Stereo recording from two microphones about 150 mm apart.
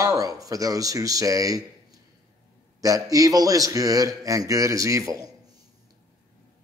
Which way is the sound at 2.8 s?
25° right (ahead or behind).